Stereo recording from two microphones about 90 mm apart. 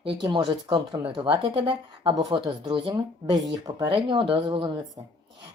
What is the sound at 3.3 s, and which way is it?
Speech, 50° right (ahead or behind).